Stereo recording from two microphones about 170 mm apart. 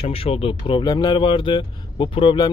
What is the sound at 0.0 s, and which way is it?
Speech, 35° left (ahead or behind).